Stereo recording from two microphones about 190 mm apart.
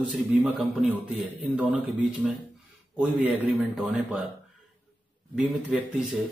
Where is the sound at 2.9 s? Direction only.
5° right (ahead or behind).